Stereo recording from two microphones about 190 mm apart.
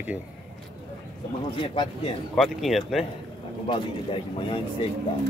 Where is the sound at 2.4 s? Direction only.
Centre (ahead or behind).